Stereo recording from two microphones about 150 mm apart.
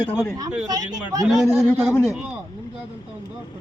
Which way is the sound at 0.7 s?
25° right (ahead or behind).